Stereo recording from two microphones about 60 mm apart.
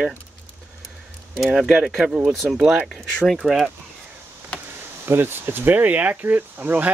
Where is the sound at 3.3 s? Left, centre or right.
Centre.